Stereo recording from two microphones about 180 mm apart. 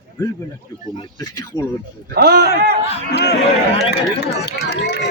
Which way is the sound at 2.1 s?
65° right (ahead or behind).